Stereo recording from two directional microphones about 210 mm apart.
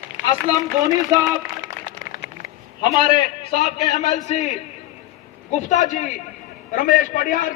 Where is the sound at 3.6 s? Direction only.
35° left (ahead or behind).